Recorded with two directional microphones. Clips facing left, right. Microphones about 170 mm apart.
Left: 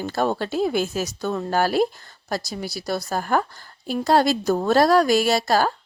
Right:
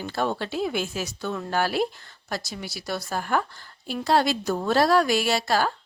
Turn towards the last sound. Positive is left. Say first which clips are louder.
# left 4 dB
turn(degrees=40)  # may be behind; listen again after turning